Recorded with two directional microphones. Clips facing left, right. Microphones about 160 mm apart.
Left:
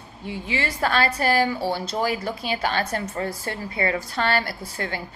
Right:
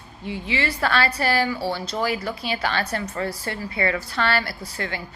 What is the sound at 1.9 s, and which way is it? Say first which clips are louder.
A woman's voice: even; 45° left (ahead or behind).